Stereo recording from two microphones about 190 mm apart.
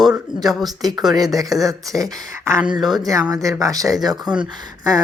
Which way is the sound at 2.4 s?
15° right (ahead or behind).